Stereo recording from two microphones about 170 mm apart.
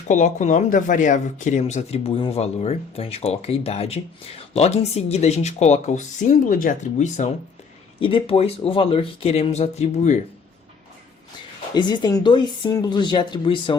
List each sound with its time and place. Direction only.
0.1 s speech: 45° left (ahead or behind)
7.9 s speech: 30° left (ahead or behind)
11.7 s speech: 25° left (ahead or behind)